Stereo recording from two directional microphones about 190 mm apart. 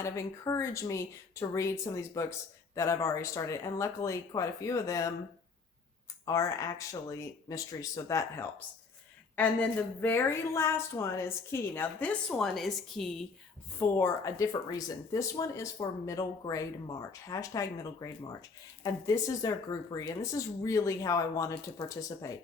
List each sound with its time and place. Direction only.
0.0 s speech: 15° left (ahead or behind)
6.2 s speech: 15° left (ahead or behind)
13.7 s speech: 10° left (ahead or behind)